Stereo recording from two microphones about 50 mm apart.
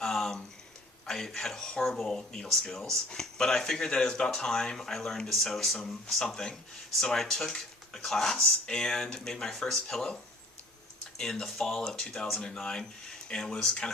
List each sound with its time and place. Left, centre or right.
0.0 s a sound: centre
1.0 s speech: centre
11.2 s speech: centre